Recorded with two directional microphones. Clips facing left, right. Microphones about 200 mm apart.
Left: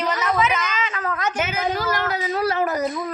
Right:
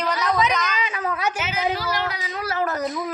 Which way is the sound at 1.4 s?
50° left (ahead or behind).